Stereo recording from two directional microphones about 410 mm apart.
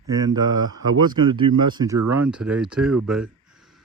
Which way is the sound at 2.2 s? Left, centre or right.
Centre.